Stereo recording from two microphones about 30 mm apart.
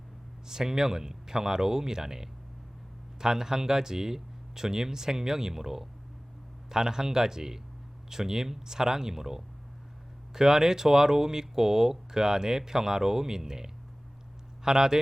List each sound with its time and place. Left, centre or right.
0.4 s speech: centre